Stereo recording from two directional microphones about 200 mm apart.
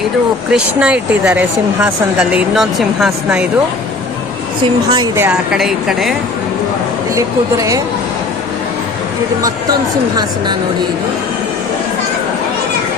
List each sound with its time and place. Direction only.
0.5 s speech: 5° right (ahead or behind)
4.9 s speech: 10° right (ahead or behind)
7.2 s a woman's voice: 15° right (ahead or behind)